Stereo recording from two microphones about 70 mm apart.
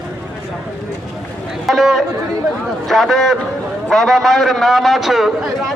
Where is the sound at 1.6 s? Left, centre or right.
Centre.